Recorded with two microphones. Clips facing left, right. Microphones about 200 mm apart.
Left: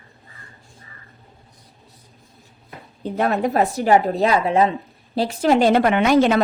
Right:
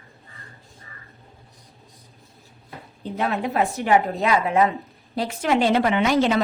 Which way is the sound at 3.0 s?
50° left (ahead or behind).